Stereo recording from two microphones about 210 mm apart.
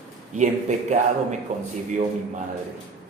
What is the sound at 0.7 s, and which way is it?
Speech, 35° right (ahead or behind).